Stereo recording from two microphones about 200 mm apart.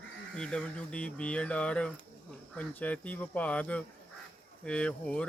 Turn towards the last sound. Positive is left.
turn(degrees=5)  # may be behind; listen again after turning